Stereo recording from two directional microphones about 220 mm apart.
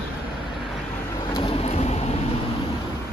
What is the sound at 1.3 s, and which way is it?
Vehicle, 25° left (ahead or behind).